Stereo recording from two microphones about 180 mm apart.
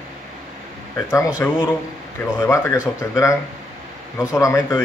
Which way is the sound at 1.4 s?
10° left (ahead or behind).